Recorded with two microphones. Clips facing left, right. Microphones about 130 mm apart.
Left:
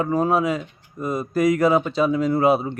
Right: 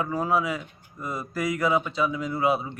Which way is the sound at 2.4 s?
30° left (ahead or behind).